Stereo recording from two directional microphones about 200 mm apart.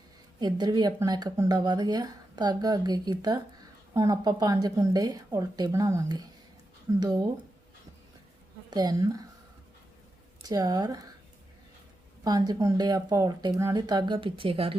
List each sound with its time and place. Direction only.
0.3 s speech: 20° right (ahead or behind)
8.7 s speech: 20° right (ahead or behind)
10.4 s speech: 20° right (ahead or behind)
12.2 s speech: 20° right (ahead or behind)